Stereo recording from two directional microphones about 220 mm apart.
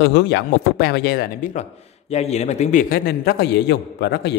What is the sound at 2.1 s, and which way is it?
Speech, 30° left (ahead or behind).